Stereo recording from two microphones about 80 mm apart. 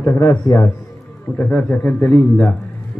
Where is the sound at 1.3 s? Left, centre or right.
Centre.